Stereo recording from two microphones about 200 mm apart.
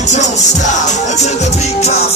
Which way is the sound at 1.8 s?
30° left (ahead or behind).